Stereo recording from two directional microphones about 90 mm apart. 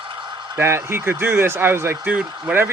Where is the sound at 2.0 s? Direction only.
15° right (ahead or behind).